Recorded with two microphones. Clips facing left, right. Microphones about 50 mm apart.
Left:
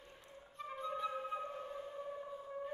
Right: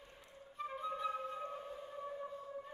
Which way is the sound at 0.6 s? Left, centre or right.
Centre.